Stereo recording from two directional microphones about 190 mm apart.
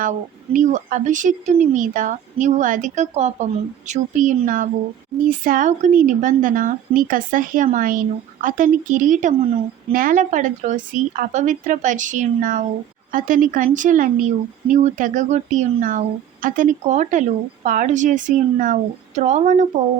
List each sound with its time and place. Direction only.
0.0 s a woman's voice: 45° right (ahead or behind)